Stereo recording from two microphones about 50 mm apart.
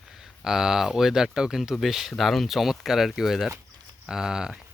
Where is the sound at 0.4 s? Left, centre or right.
Centre.